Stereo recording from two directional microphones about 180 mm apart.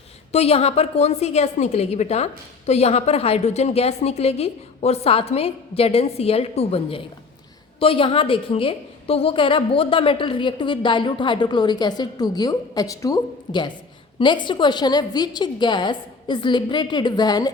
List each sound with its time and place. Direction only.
0.3 s a woman's voice: 35° left (ahead or behind)